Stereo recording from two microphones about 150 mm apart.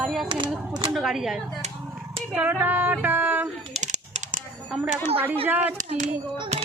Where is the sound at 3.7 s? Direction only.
50° right (ahead or behind).